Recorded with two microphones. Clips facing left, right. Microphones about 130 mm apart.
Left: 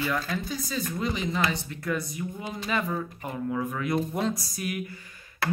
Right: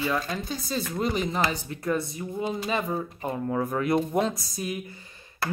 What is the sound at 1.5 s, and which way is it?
Speech, 35° right (ahead or behind).